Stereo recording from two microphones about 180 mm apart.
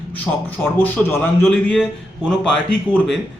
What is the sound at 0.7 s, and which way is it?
Speech, 10° left (ahead or behind).